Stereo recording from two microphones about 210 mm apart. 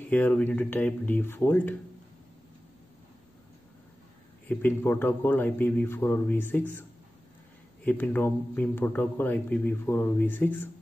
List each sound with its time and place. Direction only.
0.1 s a man's voice: 10° left (ahead or behind)
4.5 s a man's voice: 10° left (ahead or behind)
7.8 s a man's voice: 5° left (ahead or behind)